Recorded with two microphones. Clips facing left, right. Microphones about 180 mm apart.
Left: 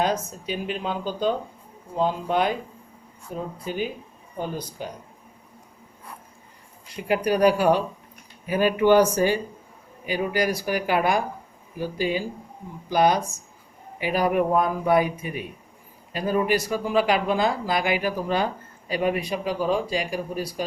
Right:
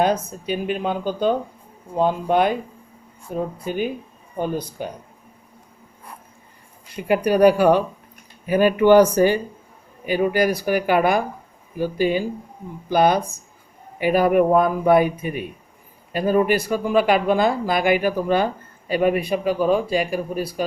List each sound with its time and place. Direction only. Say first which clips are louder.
0.0 s speech: right 4 dB; 55° right (ahead or behind)
3.6 s speech: right 4 dB; 55° right (ahead or behind)
7.1 s speech: right 5 dB; 55° right (ahead or behind)